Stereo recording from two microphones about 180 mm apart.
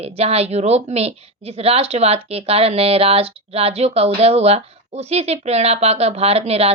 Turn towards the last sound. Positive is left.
turn(degrees=-35)  # may be behind; listen again after turning